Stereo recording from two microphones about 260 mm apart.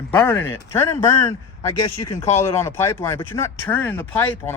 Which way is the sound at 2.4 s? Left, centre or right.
Centre.